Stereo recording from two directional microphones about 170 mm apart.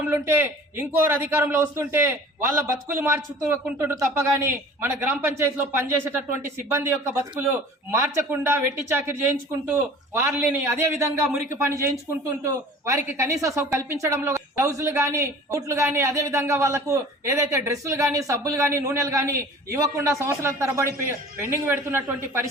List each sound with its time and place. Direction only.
0.0 s a woman's voice: 10° right (ahead or behind)